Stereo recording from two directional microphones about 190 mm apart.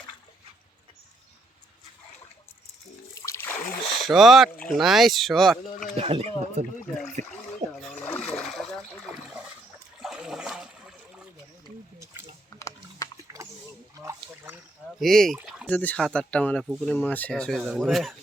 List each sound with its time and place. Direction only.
3.2 s splash: 15° left (ahead or behind)
4.0 s speech: centre (ahead or behind)
6.0 s speech: 30° right (ahead or behind)
7.8 s splash: 5° left (ahead or behind)
10.0 s water: centre (ahead or behind)
12.5 s chewing: 15° left (ahead or behind)
14.0 s a sound: 15° right (ahead or behind)
15.7 s speech: 10° left (ahead or behind)